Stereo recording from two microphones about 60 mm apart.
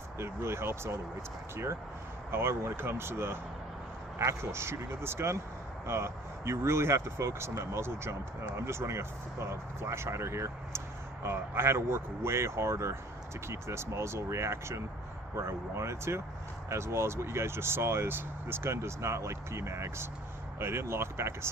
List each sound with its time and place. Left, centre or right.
0.2 s speech: right
2.3 s speech: right